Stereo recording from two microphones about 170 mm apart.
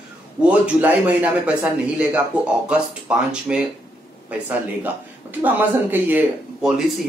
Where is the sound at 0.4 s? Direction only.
10° right (ahead or behind).